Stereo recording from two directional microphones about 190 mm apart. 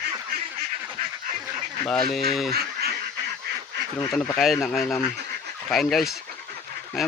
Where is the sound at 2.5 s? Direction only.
55° right (ahead or behind).